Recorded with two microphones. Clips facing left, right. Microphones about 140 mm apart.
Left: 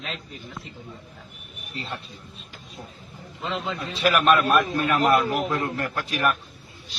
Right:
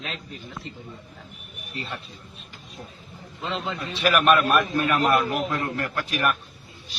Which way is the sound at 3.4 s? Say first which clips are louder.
Even; centre (ahead or behind).